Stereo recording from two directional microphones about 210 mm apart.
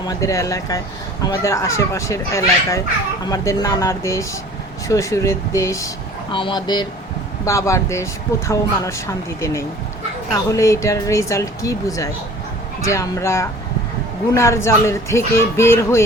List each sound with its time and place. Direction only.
0.1 s speech: 15° left (ahead or behind)